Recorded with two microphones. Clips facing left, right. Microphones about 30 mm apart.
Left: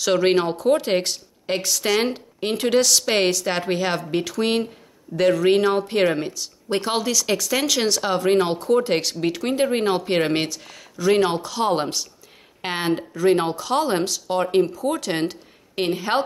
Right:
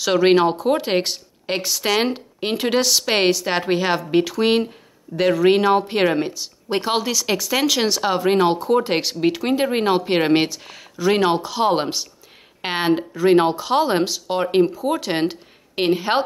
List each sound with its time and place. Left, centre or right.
0.0 s speech: centre